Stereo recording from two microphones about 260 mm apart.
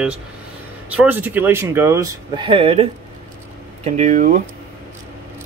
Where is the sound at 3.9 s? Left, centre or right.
Right.